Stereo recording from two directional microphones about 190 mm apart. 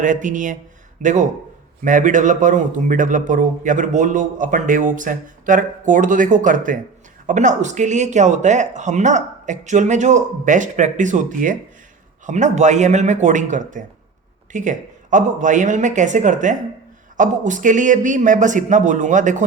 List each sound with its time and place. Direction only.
0.0 s a man's voice: 40° right (ahead or behind)